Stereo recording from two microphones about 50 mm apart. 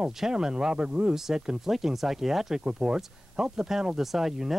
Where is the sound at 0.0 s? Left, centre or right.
Centre.